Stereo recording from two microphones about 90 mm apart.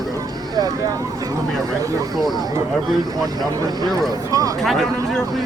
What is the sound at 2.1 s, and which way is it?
Speech, centre (ahead or behind).